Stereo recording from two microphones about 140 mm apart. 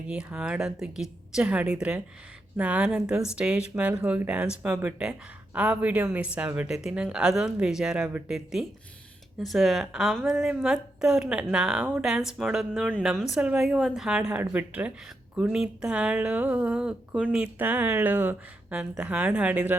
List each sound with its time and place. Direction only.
0.1 s a woman's voice: 5° right (ahead or behind)